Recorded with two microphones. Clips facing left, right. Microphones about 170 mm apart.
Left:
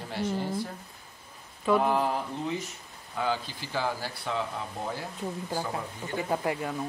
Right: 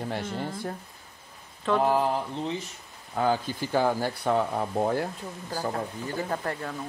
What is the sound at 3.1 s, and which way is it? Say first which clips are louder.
Speech: right 5 dB; 45° right (ahead or behind).